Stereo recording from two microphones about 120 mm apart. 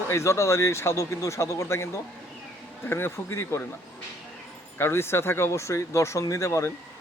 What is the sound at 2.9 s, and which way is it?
Speech, 20° left (ahead or behind).